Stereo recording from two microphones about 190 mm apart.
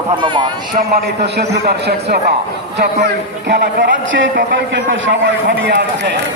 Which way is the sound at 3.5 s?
65° right (ahead or behind).